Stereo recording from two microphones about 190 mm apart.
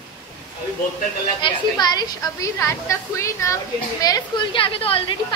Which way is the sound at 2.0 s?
20° left (ahead or behind).